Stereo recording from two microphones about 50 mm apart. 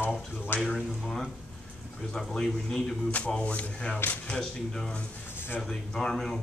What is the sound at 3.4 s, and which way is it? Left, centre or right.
Speech, left.